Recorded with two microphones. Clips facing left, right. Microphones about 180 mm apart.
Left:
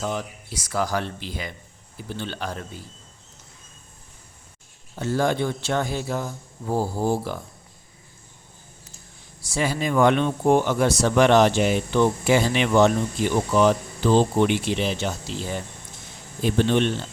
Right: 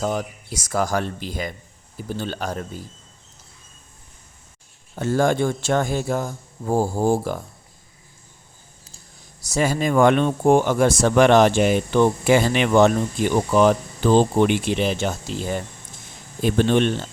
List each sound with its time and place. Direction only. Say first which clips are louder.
0.0 s speech: right 4 dB; 45° right (ahead or behind)
4.9 s speech: right 3 dB; 50° right (ahead or behind)
9.4 s speech: right 4 dB; 45° right (ahead or behind)